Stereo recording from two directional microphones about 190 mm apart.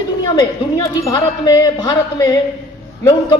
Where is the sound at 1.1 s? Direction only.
25° left (ahead or behind).